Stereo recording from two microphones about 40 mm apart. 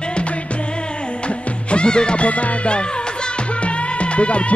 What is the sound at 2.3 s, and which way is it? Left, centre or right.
Music, left.